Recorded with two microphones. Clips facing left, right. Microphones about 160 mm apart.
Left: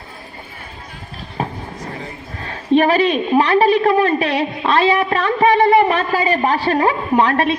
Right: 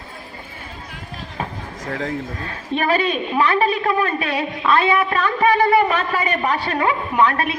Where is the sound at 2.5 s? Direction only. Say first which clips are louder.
Left 7 dB; 30° left (ahead or behind).